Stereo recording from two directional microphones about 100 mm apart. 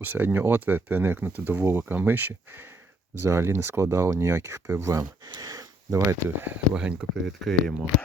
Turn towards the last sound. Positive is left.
turn(degrees=5)  # may be behind; listen again after turning